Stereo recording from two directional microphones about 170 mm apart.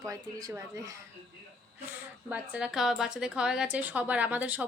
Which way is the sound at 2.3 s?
5° right (ahead or behind).